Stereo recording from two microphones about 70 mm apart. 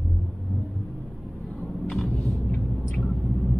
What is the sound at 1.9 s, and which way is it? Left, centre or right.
Vehicle, centre.